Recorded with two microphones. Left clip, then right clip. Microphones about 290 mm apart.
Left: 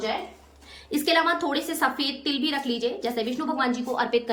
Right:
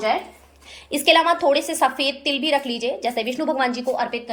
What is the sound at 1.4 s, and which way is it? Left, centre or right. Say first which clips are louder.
Speech: right 9 dB; left.